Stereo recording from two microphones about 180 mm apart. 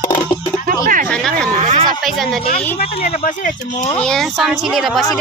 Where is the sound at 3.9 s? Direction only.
5° left (ahead or behind).